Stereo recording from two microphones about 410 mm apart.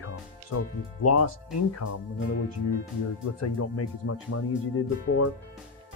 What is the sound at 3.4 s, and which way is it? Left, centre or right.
Speech, left.